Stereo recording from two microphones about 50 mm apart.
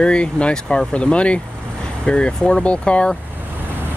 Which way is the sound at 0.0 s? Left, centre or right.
Centre.